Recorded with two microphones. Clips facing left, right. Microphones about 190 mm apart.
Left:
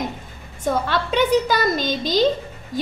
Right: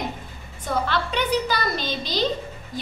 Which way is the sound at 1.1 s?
45° left (ahead or behind).